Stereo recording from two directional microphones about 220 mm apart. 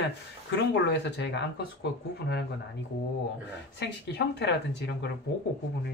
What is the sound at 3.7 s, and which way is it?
Speech, 50° left (ahead or behind).